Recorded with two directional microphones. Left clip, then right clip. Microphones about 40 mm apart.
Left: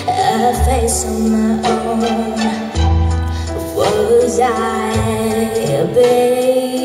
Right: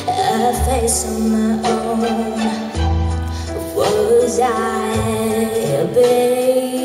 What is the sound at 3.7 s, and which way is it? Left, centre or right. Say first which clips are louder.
Music: left 1 dB; centre.